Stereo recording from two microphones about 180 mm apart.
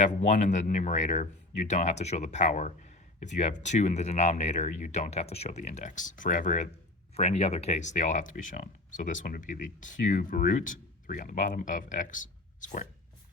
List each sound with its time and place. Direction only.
0.0 s speech: 40° left (ahead or behind)